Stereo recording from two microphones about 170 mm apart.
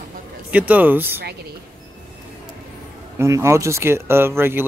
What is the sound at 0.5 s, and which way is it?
Speech, 10° right (ahead or behind).